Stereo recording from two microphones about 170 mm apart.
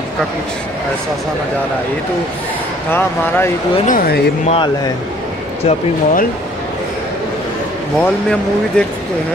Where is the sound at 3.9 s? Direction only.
60° left (ahead or behind).